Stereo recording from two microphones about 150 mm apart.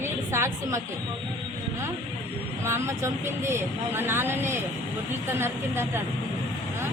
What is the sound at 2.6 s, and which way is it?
Speech, 15° right (ahead or behind).